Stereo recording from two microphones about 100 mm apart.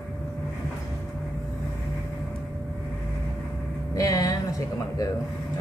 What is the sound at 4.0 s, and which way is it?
Speech, 35° left (ahead or behind).